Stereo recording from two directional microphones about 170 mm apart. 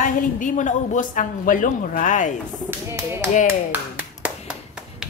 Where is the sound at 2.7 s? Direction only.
15° right (ahead or behind).